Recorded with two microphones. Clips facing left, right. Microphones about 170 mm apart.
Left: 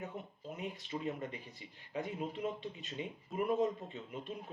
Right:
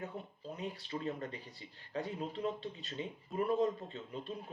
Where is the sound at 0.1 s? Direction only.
15° left (ahead or behind).